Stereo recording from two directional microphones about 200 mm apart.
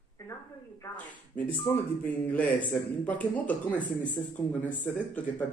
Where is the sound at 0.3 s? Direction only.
15° left (ahead or behind).